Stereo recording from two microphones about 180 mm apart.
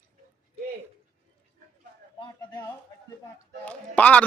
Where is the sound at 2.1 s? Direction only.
25° left (ahead or behind).